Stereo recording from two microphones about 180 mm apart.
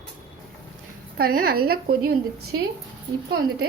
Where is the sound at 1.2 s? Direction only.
55° right (ahead or behind).